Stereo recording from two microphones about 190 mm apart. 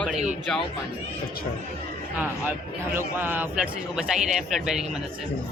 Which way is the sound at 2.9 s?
10° right (ahead or behind).